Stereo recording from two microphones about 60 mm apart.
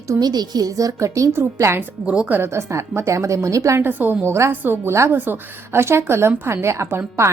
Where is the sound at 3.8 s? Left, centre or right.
Right.